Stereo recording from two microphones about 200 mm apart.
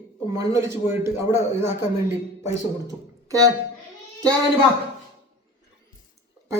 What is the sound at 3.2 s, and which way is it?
Speech, 15° right (ahead or behind).